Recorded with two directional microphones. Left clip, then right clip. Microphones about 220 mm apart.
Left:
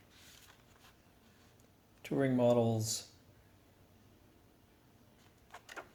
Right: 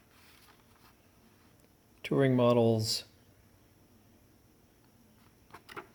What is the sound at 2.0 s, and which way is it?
Speech, 45° right (ahead or behind).